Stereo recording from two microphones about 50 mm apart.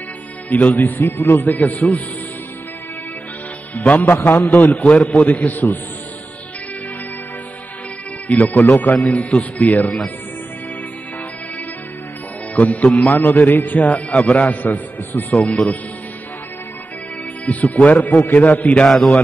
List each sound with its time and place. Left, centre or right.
0.5 s a man's voice: left
0.9 s a man's voice: left
3.7 s speech: left
4.0 s a man's voice: left
4.5 s a man's voice: left
8.3 s a man's voice: left
12.5 s a man's voice: left
17.5 s a man's voice: left
18.9 s a man's voice: centre